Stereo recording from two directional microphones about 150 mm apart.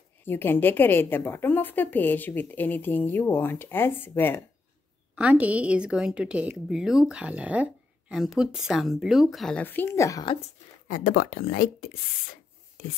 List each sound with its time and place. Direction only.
0.2 s a woman's voice: 15° left (ahead or behind)
5.1 s a woman's voice: 10° right (ahead or behind); by 10.2 s 20° left (ahead or behind)
10.9 s speech: 65° left (ahead or behind)